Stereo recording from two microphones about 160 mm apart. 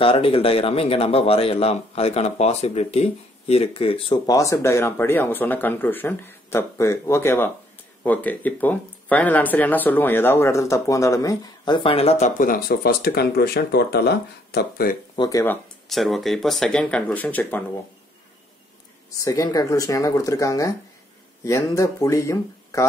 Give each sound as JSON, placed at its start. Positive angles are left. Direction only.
{"t": 0.0, "sound": "speech", "side_deg": 35}
{"t": 4.3, "sound": "speech", "side_deg": 20}
{"t": 12.4, "sound": "speech", "side_deg": 65}
{"t": 15.1, "sound": "speech", "side_deg": 20}
{"t": 15.9, "sound": "speech", "side_deg": 0}
{"t": 19.0, "sound": "speech", "side_deg": 20}